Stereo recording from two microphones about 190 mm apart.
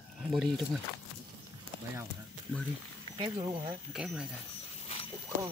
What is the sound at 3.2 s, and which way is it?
Speech, 20° right (ahead or behind).